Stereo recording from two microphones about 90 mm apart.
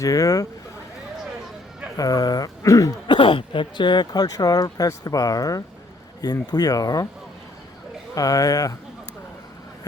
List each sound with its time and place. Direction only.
0.0 s speech: 40° left (ahead or behind)
2.0 s speech: 45° left (ahead or behind)
3.1 s speech: 65° left (ahead or behind); by 7.1 s 45° left (ahead or behind)
8.1 s speech: 40° left (ahead or behind)